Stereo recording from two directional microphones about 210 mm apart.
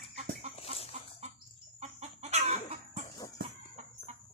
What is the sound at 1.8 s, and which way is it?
Chicken, 30° right (ahead or behind).